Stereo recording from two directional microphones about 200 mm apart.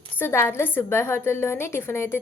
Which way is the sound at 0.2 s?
10° left (ahead or behind).